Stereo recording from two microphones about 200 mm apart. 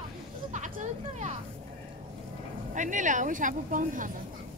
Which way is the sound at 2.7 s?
40° right (ahead or behind).